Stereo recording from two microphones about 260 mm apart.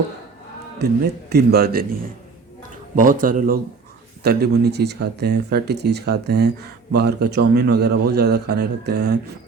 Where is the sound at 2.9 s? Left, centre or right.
Right.